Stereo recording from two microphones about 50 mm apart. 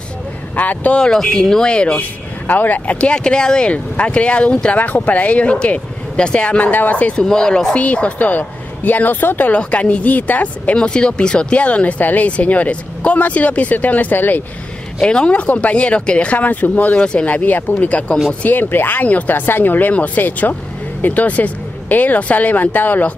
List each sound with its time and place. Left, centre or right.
0.6 s speech: left
0.9 s speech: centre
2.0 s speech: left
3.0 s speech: centre
6.7 s speech: left
7.2 s speech: centre
7.8 s speech: left
9.5 s speech: left
10.8 s speech: centre; by 14.4 s left
15.0 s speech: centre
16.3 s speech: left
17.0 s speech: centre
17.3 s speech: left
18.4 s speech: left